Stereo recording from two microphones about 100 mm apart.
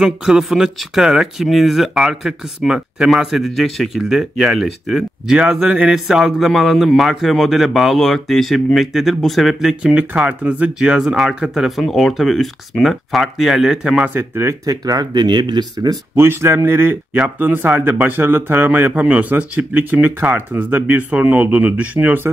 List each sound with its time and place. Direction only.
0.0 s speech: 5° right (ahead or behind)
14.1 s speech: 25° right (ahead or behind); by 16.0 s 45° right (ahead or behind)
16.2 s a man's voice: 25° right (ahead or behind)